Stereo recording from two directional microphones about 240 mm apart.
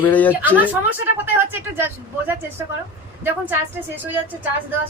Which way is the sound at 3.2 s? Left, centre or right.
Centre.